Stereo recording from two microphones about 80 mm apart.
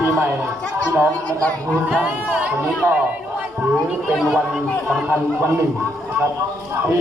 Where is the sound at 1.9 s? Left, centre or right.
Centre.